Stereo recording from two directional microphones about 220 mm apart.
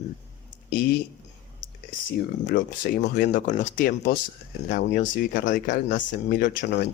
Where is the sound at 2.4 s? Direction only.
45° left (ahead or behind).